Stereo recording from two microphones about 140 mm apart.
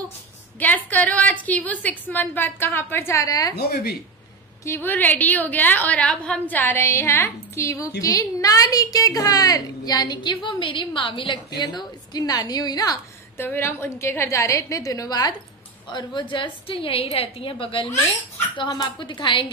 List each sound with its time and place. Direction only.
0.6 s a woman's voice: 10° left (ahead or behind)
4.6 s a woman's voice: 15° left (ahead or behind)
13.4 s a woman's voice: 15° left (ahead or behind); by 19.5 s 35° left (ahead or behind)